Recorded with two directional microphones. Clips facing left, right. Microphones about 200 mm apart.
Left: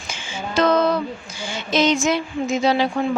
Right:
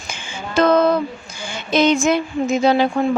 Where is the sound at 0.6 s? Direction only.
55° right (ahead or behind).